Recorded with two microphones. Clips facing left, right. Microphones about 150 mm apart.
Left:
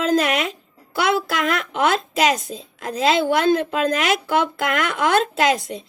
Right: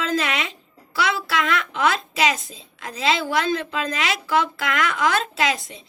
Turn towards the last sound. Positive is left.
turn(degrees=50)  # may be behind; listen again after turning